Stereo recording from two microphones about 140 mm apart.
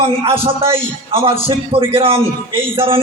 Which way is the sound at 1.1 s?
40° right (ahead or behind).